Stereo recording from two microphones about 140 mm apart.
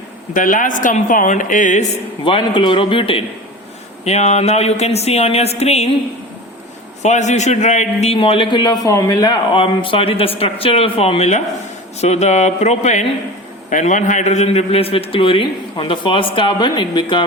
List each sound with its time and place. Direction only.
0.3 s speech: 70° left (ahead or behind)
2.2 s a man's voice: 35° left (ahead or behind)
4.0 s speech: 50° left (ahead or behind)
7.0 s a man's voice: 55° left (ahead or behind); by 9.4 s 25° left (ahead or behind)
9.5 s a man's voice: 40° left (ahead or behind)